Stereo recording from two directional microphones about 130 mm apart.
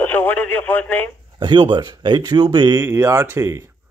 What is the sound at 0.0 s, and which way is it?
Speech, 15° left (ahead or behind).